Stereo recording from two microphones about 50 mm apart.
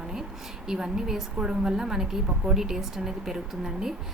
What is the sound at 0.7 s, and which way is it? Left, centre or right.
A woman's voice, centre.